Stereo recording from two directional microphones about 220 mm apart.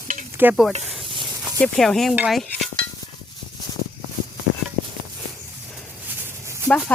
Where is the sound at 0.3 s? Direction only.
5° right (ahead or behind).